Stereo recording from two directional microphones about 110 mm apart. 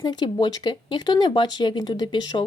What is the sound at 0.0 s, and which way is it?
A woman's voice, 40° left (ahead or behind).